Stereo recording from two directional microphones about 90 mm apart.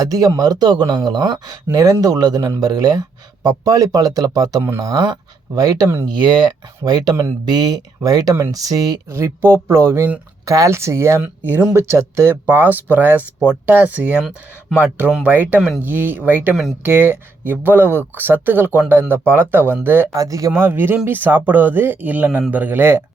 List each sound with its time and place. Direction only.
0.0 s speech: 45° right (ahead or behind)
1.7 s speech: 40° right (ahead or behind)
9.0 s speech: 30° right (ahead or behind)
14.2 s speech: 5° right (ahead or behind)
14.8 s speech: 20° right (ahead or behind)
20.1 s speech: 40° right (ahead or behind)